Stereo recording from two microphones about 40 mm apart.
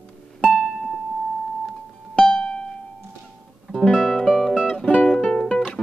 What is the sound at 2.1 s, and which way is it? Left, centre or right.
Music, left.